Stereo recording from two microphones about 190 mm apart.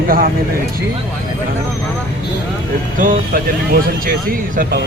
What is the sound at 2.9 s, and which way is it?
Speech, 45° right (ahead or behind).